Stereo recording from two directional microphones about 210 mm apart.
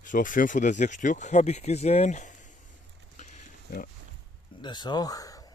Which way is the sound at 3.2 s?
35° left (ahead or behind).